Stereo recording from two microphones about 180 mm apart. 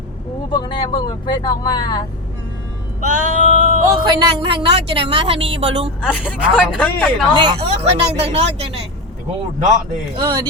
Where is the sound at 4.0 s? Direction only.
25° right (ahead or behind).